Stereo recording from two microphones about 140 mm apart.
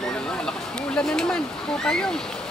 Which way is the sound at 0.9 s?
5° left (ahead or behind).